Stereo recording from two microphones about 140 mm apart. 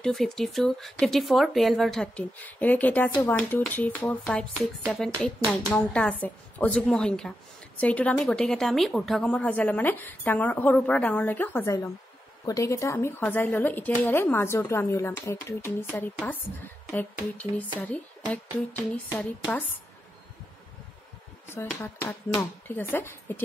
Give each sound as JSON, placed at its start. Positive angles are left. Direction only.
{"t": 0.0, "sound": "a woman's voice", "side_deg": 0}
{"t": 21.5, "sound": "a woman's voice", "side_deg": 15}